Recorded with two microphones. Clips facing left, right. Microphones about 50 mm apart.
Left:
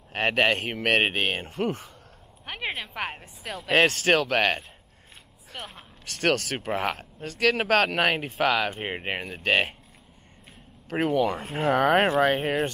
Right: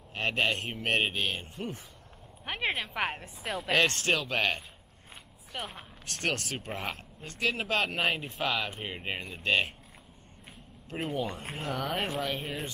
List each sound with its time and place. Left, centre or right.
0.1 s speech: left
0.6 s speech: left
1.0 s speech: left
1.5 s speech: left
2.4 s speech: centre
4.1 s speech: left
5.5 s speech: centre
6.2 s speech: left
6.7 s speech: left
8.7 s speech: left
11.0 s speech: left